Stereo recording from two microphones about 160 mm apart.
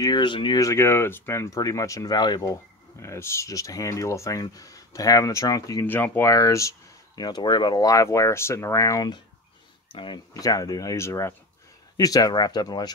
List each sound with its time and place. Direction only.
0.0 s speech: 25° left (ahead or behind)